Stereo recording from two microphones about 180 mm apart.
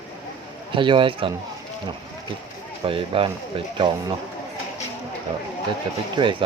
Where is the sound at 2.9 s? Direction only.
30° right (ahead or behind).